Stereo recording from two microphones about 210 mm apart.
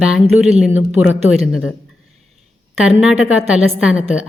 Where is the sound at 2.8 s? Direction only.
5° right (ahead or behind).